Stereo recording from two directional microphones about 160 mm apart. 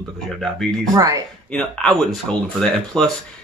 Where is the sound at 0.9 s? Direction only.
20° right (ahead or behind).